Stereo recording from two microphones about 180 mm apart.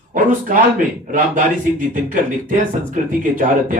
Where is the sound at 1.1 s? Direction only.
45° right (ahead or behind).